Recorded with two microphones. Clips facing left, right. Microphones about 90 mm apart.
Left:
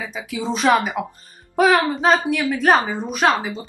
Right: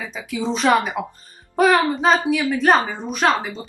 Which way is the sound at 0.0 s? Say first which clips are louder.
Right 1 dB; 15° left (ahead or behind).